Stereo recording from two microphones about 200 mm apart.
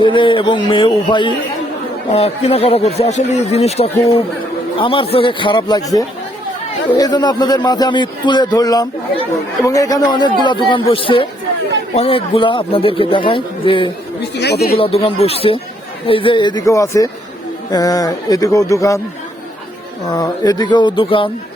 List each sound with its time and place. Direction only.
0.0 s a man's voice: 25° left (ahead or behind)
14.3 s speech: 55° left (ahead or behind)
14.8 s a man's voice: 30° left (ahead or behind)
20.1 s a man's voice: 20° left (ahead or behind)